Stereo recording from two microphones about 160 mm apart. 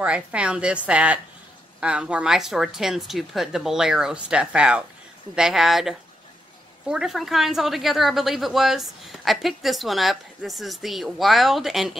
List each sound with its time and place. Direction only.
0.0 s a woman's voice: 5° right (ahead or behind)